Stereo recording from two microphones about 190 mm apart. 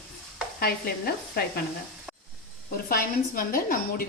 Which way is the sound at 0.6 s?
55° left (ahead or behind).